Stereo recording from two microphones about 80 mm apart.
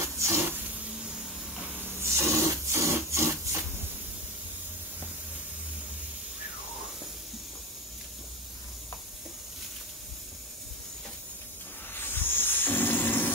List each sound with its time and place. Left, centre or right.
0.0 s a sound: right
2.0 s wood: right
11.9 s hiss: left